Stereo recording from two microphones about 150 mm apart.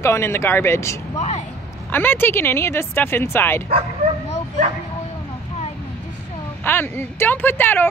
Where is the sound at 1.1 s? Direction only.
50° left (ahead or behind).